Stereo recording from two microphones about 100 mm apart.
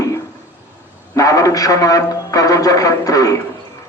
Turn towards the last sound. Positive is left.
turn(degrees=35)  # may be behind; listen again after turning